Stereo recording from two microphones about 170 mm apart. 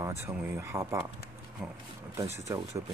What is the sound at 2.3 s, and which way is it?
Speech, 15° right (ahead or behind).